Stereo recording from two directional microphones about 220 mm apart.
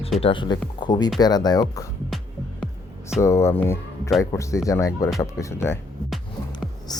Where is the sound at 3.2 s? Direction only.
10° left (ahead or behind).